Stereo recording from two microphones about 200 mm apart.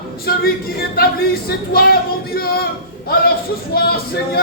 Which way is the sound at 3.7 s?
50° left (ahead or behind).